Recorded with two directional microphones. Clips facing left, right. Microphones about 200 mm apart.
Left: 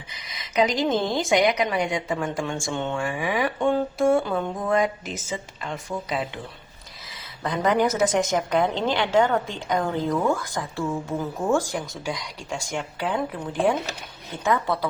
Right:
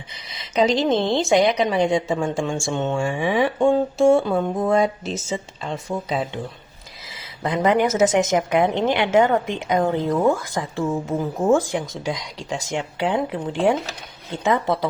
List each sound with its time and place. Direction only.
0.5 s a woman's voice: 25° right (ahead or behind)
7.4 s a woman's voice: 25° right (ahead or behind)
12.6 s a woman's voice: 25° right (ahead or behind)
14.4 s a woman's voice: 25° right (ahead or behind)